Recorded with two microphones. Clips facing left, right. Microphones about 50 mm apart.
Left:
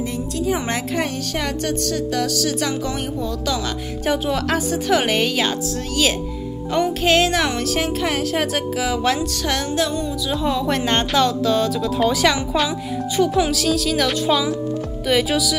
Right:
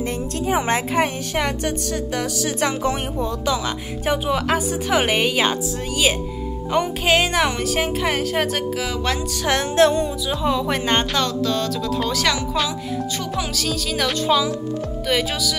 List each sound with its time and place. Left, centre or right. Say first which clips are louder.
0.5 s a woman's voice: right 3 dB; right
3.4 s speech: right 1 dB; centre
6.7 s speech: left 1 dB; centre
9.8 s music: right 9 dB; right
10.3 s speech: left 1 dB; centre